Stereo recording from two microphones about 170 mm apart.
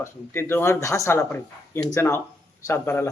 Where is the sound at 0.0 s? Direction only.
15° left (ahead or behind).